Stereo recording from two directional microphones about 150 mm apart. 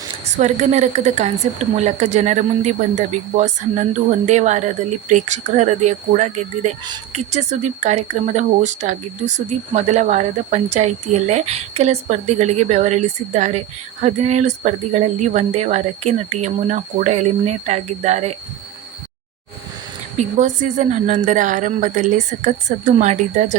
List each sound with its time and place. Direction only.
0.3 s speech: 55° right (ahead or behind)
20.1 s a woman's voice: 55° right (ahead or behind)